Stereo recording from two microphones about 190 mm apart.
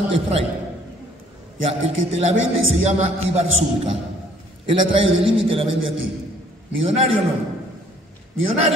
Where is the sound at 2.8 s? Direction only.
35° right (ahead or behind).